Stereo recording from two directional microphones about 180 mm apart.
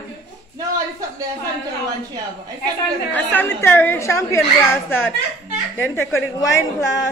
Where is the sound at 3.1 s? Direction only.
10° left (ahead or behind).